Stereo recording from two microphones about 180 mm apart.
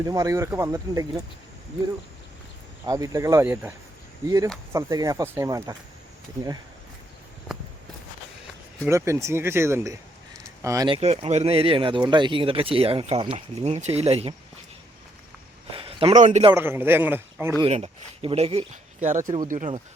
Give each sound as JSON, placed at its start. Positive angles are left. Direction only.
{"t": 0.0, "sound": "speech", "side_deg": -20}
{"t": 2.8, "sound": "speech", "side_deg": -20}
{"t": 8.9, "sound": "speech", "side_deg": -15}
{"t": 10.8, "sound": "speech", "side_deg": -30}
{"t": 15.7, "sound": "speech", "side_deg": -30}
{"t": 16.6, "sound": "speech", "side_deg": -10}
{"t": 17.7, "sound": "speech", "side_deg": -35}